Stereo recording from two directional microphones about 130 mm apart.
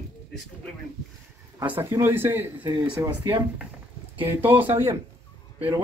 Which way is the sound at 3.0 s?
35° right (ahead or behind).